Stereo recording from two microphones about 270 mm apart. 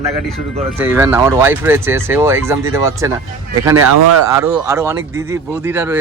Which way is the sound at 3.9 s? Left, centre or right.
Right.